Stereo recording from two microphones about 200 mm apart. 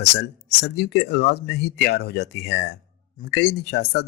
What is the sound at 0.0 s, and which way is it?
Speech, 55° left (ahead or behind).